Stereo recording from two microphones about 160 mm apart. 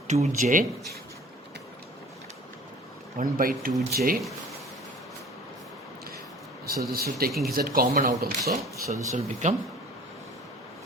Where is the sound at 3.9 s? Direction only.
75° right (ahead or behind).